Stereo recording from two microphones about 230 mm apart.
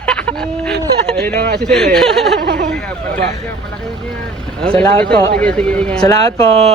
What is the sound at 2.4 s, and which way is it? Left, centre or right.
Speech, right.